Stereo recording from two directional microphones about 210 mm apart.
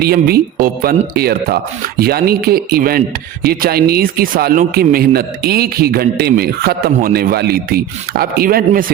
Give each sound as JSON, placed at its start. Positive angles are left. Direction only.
{"t": 0.0, "sound": "speech", "side_deg": -50}